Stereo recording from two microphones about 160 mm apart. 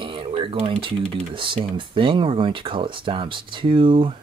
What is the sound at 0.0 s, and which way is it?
Speech, 35° right (ahead or behind).